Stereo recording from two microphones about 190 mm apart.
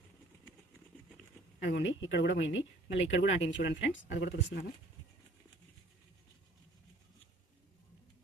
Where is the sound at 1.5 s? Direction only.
65° left (ahead or behind).